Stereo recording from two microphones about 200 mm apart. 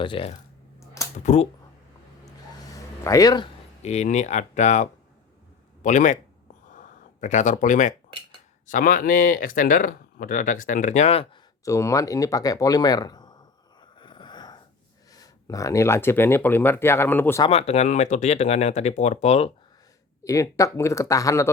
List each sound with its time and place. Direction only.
0.0 s speech: 25° left (ahead or behind)
2.2 s a sound: 15° left (ahead or behind)
3.8 s speech: 35° left (ahead or behind)
6.7 s a sound: 40° left (ahead or behind)
8.7 s speech: 45° left (ahead or behind)
11.6 s speech: 15° left (ahead or behind)
14.0 s a sound: 25° left (ahead or behind)
15.1 s speech: 15° left (ahead or behind)
17.4 s speech: 30° left (ahead or behind)
20.2 s speech: 15° left (ahead or behind)